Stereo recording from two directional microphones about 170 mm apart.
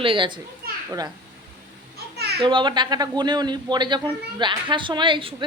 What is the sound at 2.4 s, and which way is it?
A woman's voice, 30° right (ahead or behind).